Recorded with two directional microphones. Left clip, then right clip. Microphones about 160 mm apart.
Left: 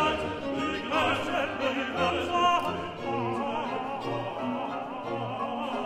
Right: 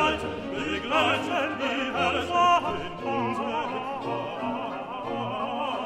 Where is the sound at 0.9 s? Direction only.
30° right (ahead or behind).